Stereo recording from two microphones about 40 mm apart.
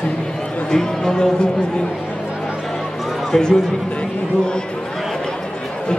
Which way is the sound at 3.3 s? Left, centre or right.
Centre.